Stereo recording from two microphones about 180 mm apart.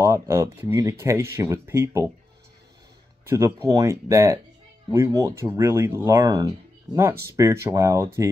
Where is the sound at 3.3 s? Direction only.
15° right (ahead or behind).